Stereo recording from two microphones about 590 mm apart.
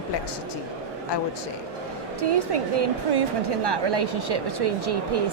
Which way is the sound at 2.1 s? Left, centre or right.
Right.